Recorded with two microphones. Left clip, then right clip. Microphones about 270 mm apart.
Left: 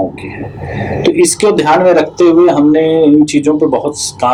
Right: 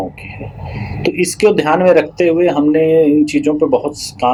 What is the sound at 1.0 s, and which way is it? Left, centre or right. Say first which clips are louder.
Speech: left 3 dB; right.